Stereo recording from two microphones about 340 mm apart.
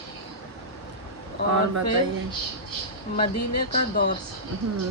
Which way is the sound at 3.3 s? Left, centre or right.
Left.